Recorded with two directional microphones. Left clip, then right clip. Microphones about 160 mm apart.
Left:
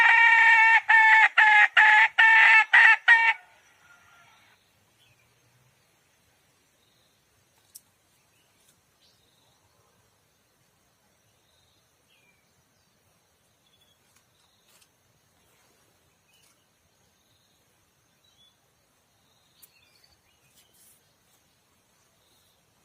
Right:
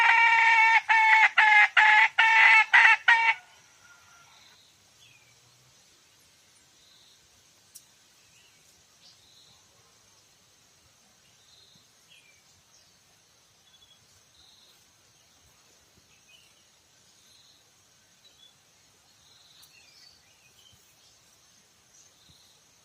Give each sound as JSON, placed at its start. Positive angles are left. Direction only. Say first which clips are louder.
{"t": 0.0, "sound": "chicken", "louder": "left 3 dB", "side_deg": 75}